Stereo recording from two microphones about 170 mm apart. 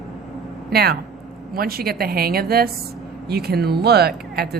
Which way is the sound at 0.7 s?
65° right (ahead or behind).